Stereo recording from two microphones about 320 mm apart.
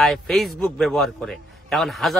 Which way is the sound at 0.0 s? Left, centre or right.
Centre.